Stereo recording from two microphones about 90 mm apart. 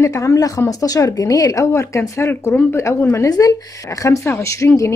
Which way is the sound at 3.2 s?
45° left (ahead or behind).